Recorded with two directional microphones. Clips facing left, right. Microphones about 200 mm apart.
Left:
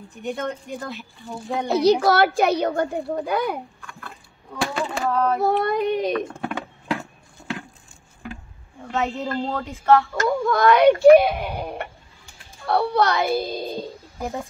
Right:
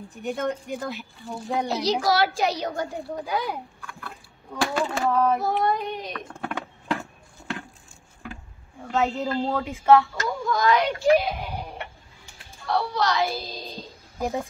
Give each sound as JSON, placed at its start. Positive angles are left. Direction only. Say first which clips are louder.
{"t": 0.2, "sound": "a woman's voice", "louder": "even", "side_deg": 0}
{"t": 1.9, "sound": "speech", "louder": "left 6 dB", "side_deg": 60}
{"t": 4.6, "sound": "a woman's voice", "louder": "even", "side_deg": 0}
{"t": 5.4, "sound": "child singing", "louder": "left 4 dB", "side_deg": 65}
{"t": 6.4, "sound": "a sound", "louder": "left 3 dB", "side_deg": 5}
{"t": 8.8, "sound": "a woman's voice", "louder": "right 1 dB", "side_deg": 0}
{"t": 9.6, "sound": "speech", "louder": "even", "side_deg": -15}
{"t": 10.1, "sound": "speech", "louder": "left 6 dB", "side_deg": 60}